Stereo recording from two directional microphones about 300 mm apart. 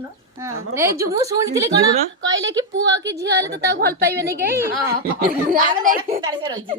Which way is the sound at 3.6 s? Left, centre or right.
Right.